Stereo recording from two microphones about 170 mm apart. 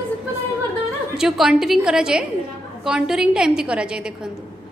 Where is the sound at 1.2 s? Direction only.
5° right (ahead or behind).